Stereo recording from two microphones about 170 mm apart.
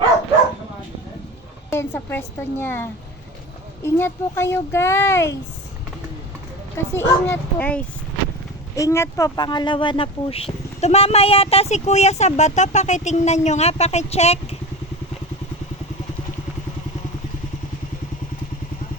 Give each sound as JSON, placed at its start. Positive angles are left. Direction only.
{"t": 1.7, "sound": "speech", "side_deg": 15}
{"t": 6.7, "sound": "speech", "side_deg": 15}